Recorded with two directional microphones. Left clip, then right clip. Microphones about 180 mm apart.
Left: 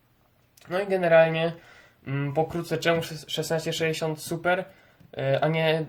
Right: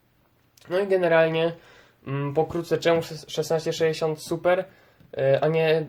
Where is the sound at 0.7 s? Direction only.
15° right (ahead or behind).